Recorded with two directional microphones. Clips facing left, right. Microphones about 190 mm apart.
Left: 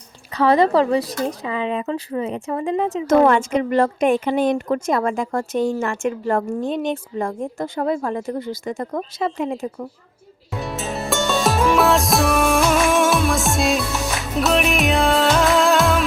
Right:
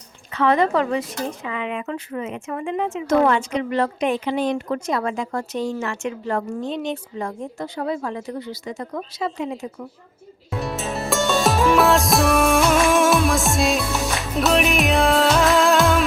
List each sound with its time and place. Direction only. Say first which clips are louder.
0.3 s speech: left 3 dB; 35° left (ahead or behind)
3.1 s speech: left 3 dB; 50° left (ahead or behind)
10.5 s music: even; centre (ahead or behind)